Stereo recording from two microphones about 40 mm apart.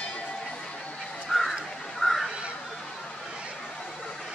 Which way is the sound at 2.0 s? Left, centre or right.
Centre.